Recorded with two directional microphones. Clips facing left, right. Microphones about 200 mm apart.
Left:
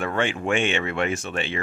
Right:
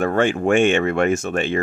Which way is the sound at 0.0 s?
45° right (ahead or behind).